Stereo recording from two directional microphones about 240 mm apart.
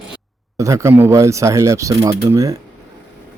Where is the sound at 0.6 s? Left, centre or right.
Centre.